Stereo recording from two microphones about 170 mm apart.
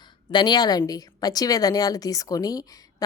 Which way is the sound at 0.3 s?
25° left (ahead or behind).